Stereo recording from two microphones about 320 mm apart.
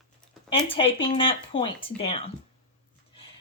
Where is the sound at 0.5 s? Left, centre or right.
Centre.